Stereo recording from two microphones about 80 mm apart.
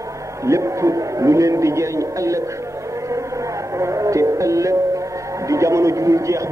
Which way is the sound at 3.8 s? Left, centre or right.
Right.